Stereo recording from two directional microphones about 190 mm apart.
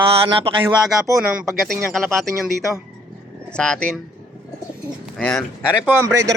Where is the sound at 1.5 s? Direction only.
Centre (ahead or behind).